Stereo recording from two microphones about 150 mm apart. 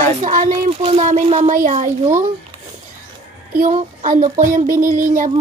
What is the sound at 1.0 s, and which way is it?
Speech, 50° right (ahead or behind).